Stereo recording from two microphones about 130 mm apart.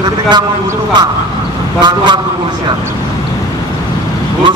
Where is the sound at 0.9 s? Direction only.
35° right (ahead or behind).